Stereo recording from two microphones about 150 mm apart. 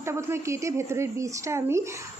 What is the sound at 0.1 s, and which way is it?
A woman's voice, 20° right (ahead or behind).